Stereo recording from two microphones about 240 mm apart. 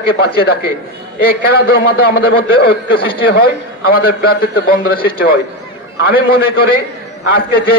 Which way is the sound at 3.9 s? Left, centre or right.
Left.